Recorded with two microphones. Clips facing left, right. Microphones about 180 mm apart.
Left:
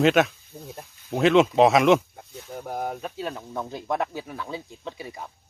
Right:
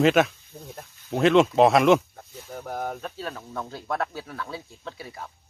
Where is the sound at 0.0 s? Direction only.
Centre (ahead or behind); by 5.3 s 15° left (ahead or behind).